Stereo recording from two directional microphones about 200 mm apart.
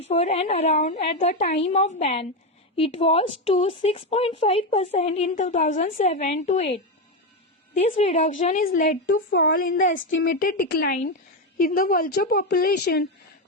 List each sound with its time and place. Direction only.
0.0 s a woman's voice: 30° left (ahead or behind)
7.8 s a woman's voice: 35° left (ahead or behind)
9.3 s speech: 60° left (ahead or behind)
9.6 s a woman's voice: 40° left (ahead or behind)